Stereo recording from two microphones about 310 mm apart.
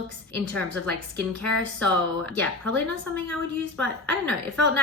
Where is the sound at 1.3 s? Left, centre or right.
Centre.